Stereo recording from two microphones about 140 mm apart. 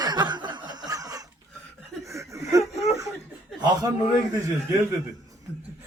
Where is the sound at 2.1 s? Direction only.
25° right (ahead or behind).